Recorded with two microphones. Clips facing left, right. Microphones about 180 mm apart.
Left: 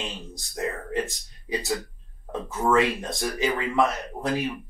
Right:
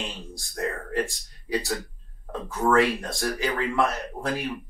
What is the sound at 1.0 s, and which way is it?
Speech, 20° left (ahead or behind).